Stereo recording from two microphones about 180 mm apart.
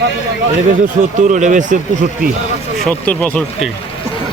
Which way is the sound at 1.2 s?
40° right (ahead or behind).